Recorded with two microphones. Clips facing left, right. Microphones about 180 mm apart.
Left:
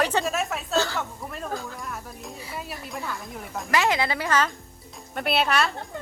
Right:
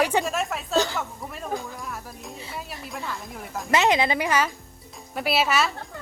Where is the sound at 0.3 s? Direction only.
Centre (ahead or behind).